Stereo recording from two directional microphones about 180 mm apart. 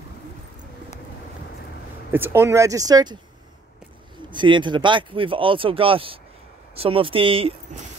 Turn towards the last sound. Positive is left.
turn(degrees=-30)  # may be behind; listen again after turning